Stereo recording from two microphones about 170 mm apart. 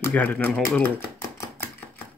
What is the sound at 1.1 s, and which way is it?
Chopping, 15° left (ahead or behind).